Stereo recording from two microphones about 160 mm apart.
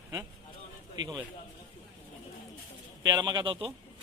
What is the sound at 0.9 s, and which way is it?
Speech, 25° right (ahead or behind).